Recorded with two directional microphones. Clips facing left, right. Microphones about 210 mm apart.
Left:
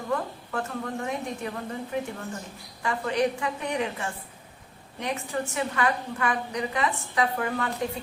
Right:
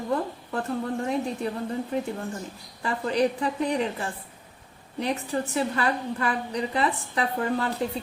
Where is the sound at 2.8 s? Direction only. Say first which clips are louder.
Right 1 dB; 35° right (ahead or behind).